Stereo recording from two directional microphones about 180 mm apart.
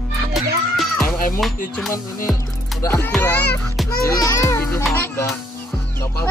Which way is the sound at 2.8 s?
15° left (ahead or behind).